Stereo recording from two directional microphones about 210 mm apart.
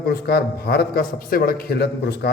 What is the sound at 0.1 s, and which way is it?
A man's voice, 50° left (ahead or behind).